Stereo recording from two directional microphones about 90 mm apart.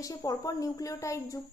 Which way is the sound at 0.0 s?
40° left (ahead or behind).